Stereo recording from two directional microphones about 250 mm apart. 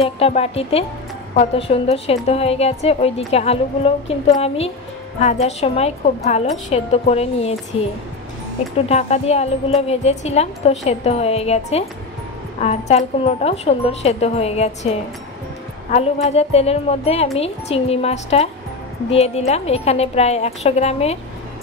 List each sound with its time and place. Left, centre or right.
0.0 s a woman's voice: left
8.8 s a woman's voice: left